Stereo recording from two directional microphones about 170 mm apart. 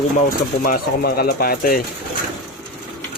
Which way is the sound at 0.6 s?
60° left (ahead or behind).